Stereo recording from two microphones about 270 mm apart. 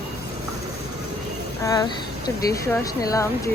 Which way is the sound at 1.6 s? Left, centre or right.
Centre.